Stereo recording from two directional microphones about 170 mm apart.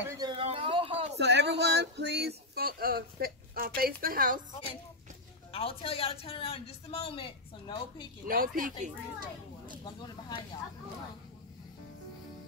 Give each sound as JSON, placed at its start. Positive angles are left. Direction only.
{"t": 0.0, "sound": "speech", "side_deg": -15}
{"t": 0.3, "sound": "a sound", "side_deg": -35}
{"t": 1.1, "sound": "speech", "side_deg": -85}
{"t": 5.5, "sound": "a woman's voice", "side_deg": 35}
{"t": 8.3, "sound": "speech", "side_deg": -55}